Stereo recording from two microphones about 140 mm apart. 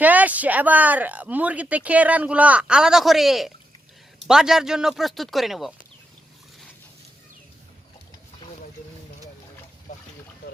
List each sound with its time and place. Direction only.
0.0 s speech: 10° right (ahead or behind)
9.9 s boat: 65° left (ahead or behind)